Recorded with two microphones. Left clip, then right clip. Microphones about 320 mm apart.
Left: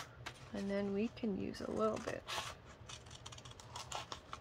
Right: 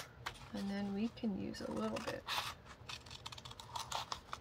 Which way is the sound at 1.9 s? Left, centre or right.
Centre.